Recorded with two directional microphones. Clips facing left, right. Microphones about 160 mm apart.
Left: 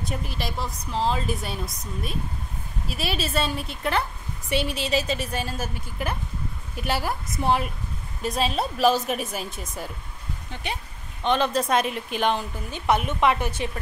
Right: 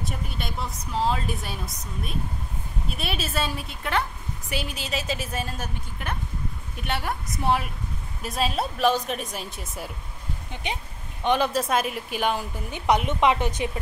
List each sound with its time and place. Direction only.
0.0 s a woman's voice: centre (ahead or behind)
10.5 s a woman's voice: 15° right (ahead or behind)